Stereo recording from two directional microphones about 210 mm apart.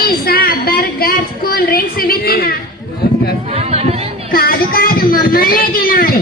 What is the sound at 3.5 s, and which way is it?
Speech, 30° right (ahead or behind).